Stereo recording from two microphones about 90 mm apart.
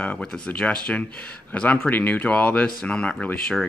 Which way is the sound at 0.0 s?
10° left (ahead or behind).